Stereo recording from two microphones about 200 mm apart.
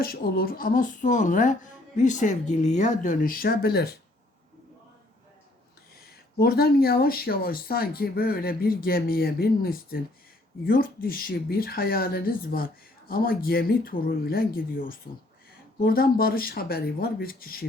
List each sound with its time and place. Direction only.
0.0 s speech: 50° left (ahead or behind)
6.0 s speech: 50° left (ahead or behind)